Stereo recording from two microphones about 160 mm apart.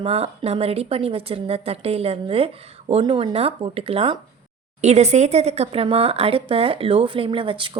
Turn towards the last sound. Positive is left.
turn(degrees=-30)  # may be behind; listen again after turning